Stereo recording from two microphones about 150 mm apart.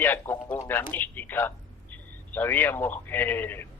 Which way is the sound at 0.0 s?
15° left (ahead or behind).